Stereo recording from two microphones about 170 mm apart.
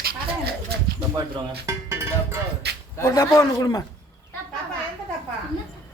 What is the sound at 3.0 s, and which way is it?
Speech, 20° left (ahead or behind).